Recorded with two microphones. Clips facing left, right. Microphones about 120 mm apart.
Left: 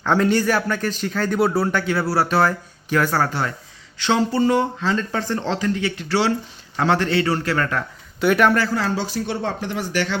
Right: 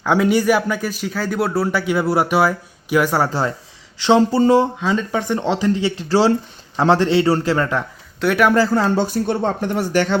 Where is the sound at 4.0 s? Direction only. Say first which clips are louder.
Right 5 dB; 30° right (ahead or behind).